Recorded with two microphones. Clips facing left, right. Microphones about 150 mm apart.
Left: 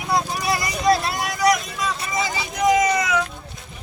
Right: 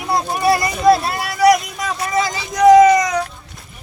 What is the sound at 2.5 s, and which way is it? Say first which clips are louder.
Speech: right 10 dB; 70° right (ahead or behind).